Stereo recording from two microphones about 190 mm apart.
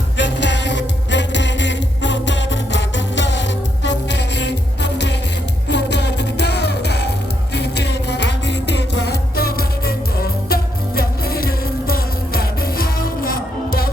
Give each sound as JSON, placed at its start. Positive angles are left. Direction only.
{"t": 0.2, "sound": "music", "side_deg": 70}